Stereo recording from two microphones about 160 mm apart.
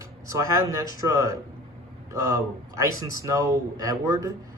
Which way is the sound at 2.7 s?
20° right (ahead or behind).